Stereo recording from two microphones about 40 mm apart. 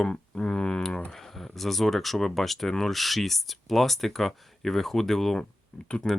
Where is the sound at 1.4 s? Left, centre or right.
Centre.